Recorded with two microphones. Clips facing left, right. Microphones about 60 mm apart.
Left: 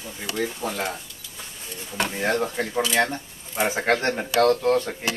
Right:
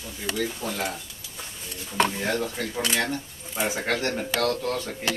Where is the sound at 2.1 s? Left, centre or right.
Left.